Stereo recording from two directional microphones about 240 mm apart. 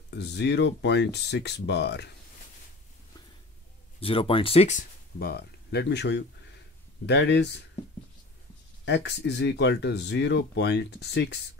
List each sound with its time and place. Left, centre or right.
0.1 s speech: left
4.0 s speech: left
8.8 s speech: left